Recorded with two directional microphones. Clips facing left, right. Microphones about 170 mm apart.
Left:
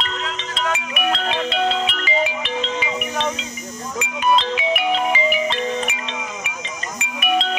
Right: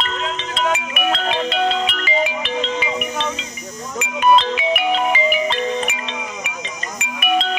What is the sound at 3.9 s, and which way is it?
Music, 60° right (ahead or behind).